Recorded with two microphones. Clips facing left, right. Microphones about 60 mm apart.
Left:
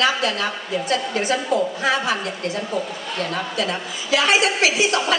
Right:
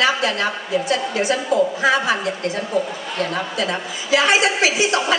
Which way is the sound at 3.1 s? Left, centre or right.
Centre.